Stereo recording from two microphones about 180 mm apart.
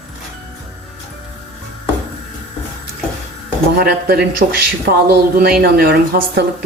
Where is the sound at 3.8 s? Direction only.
60° right (ahead or behind).